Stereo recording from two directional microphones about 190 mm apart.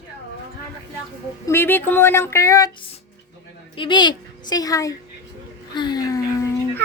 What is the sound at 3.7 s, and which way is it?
Speech, 25° left (ahead or behind).